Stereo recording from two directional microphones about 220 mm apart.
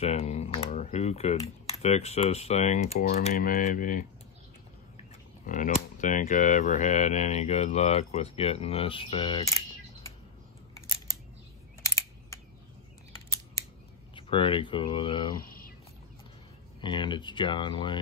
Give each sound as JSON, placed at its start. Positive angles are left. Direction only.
{"t": 0.0, "sound": "speech", "side_deg": 30}
{"t": 5.5, "sound": "speech", "side_deg": 35}
{"t": 11.8, "sound": "camera", "side_deg": 15}
{"t": 14.1, "sound": "speech", "side_deg": 25}
{"t": 16.8, "sound": "speech", "side_deg": 20}